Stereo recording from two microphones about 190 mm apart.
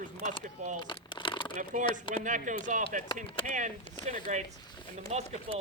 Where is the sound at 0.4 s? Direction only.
40° right (ahead or behind).